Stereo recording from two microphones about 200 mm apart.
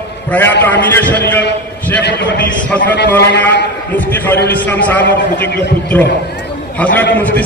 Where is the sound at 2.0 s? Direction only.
60° left (ahead or behind).